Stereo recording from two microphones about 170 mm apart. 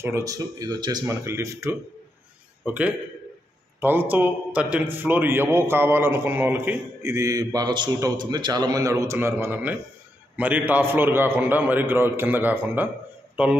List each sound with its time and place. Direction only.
0.0 s a man's voice: 20° right (ahead or behind)